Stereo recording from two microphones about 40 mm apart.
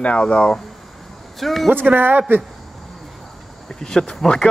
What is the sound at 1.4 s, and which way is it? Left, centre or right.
Speech, centre.